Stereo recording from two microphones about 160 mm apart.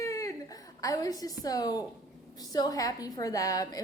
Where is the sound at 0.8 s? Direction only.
20° left (ahead or behind).